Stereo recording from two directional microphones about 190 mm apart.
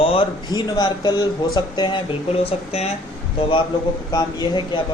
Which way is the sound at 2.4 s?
35° left (ahead or behind).